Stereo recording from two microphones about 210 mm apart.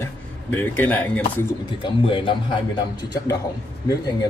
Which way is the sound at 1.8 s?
25° left (ahead or behind).